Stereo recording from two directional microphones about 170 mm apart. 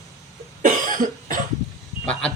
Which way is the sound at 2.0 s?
5° left (ahead or behind).